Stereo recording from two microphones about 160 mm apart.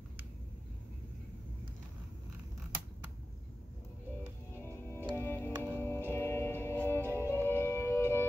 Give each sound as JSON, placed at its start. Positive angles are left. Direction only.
{"t": 4.6, "sound": "music", "side_deg": 15}